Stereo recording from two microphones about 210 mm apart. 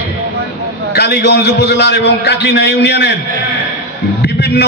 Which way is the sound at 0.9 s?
50° left (ahead or behind).